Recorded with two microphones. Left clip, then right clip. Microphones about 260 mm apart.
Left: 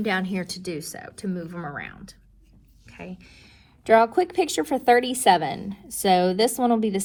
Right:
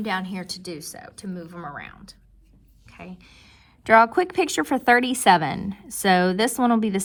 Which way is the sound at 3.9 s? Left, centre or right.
Right.